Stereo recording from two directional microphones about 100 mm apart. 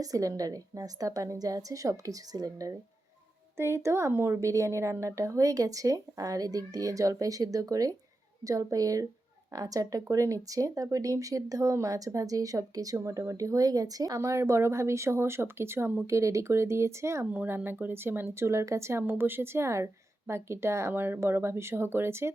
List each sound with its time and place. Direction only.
0.0 s speech: 35° right (ahead or behind)
3.6 s speech: 25° right (ahead or behind)
17.3 s speech: 15° right (ahead or behind)